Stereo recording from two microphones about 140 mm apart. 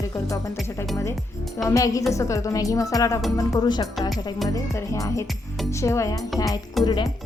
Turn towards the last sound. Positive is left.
turn(degrees=35)  # may be behind; listen again after turning